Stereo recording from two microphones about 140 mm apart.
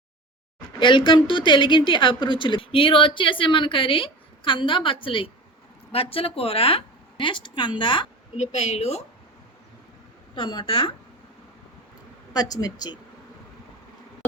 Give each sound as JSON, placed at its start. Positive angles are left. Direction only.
{"t": 0.8, "sound": "a woman's voice", "side_deg": 35}
{"t": 8.4, "sound": "a woman's voice", "side_deg": 50}
{"t": 10.3, "sound": "a woman's voice", "side_deg": 35}
{"t": 12.3, "sound": "speech", "side_deg": 25}